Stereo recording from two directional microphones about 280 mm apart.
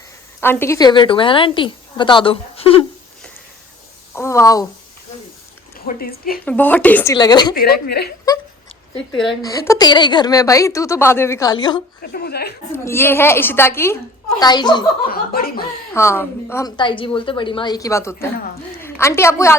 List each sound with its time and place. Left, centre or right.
0.3 s a woman's voice: centre
4.1 s a sound: centre
5.8 s speech: left
6.4 s a woman's voice: centre
7.5 s speech: left
9.4 s a woman's voice: centre
12.1 s speech: left
12.7 s a woman's voice: centre
15.0 s speech: left
15.9 s a woman's voice: centre